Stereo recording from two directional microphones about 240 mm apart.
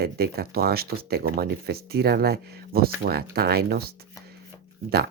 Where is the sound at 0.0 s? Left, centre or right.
Right.